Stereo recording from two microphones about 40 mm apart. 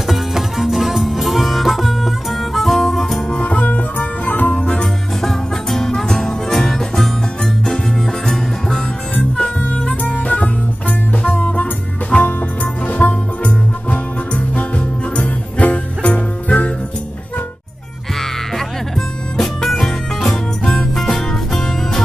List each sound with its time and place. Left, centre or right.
0.1 s music: centre
3.3 s music: left
5.2 s music: centre
9.7 s music: left
18.9 s music: centre